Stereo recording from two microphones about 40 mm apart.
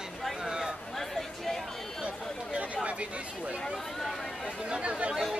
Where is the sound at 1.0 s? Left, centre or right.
Centre.